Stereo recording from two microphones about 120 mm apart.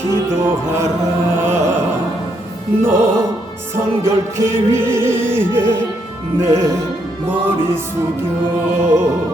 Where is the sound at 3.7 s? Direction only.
20° right (ahead or behind).